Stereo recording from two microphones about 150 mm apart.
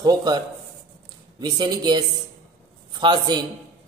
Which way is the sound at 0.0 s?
25° right (ahead or behind).